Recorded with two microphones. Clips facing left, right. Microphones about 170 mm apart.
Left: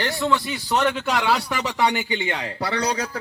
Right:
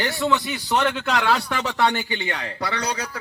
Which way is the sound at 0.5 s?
5° left (ahead or behind).